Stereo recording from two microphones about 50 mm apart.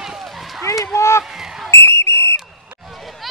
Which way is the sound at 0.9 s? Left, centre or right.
Left.